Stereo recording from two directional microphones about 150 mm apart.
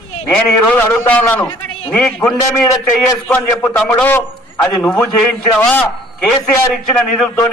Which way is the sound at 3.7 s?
10° left (ahead or behind).